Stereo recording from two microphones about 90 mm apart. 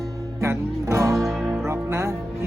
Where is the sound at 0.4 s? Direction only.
30° right (ahead or behind).